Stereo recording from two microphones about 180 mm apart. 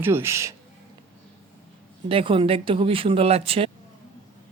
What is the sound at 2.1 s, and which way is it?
Speech, 30° right (ahead or behind).